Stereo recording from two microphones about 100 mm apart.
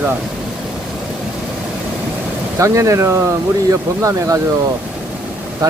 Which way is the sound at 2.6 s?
30° right (ahead or behind).